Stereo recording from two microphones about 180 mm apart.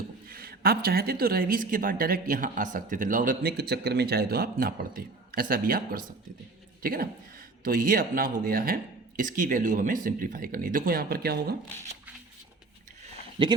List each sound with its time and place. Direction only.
0.3 s a woman's voice: 55° right (ahead or behind)
13.4 s speech: 30° right (ahead or behind)